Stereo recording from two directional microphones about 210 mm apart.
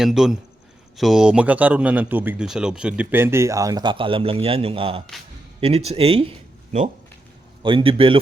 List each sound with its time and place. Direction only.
0.0 s speech: 5° right (ahead or behind); by 6.3 s 25° right (ahead or behind)
7.6 s speech: 25° right (ahead or behind)